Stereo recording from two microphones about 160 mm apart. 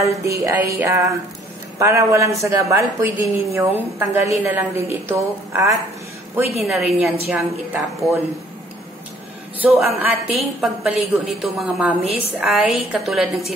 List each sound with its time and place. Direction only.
0.0 s music: 20° right (ahead or behind)
2.4 s a woman's voice: 20° right (ahead or behind)
6.6 s a woman's voice: centre (ahead or behind)
9.6 s a woman's voice: 5° right (ahead or behind)